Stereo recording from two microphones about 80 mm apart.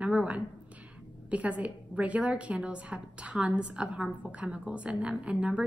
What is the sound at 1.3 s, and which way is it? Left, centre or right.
A woman's voice, centre.